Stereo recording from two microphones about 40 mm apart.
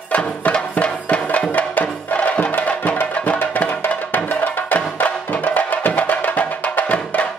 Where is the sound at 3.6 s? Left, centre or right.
Left.